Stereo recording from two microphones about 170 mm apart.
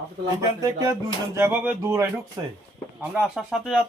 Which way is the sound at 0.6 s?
20° right (ahead or behind).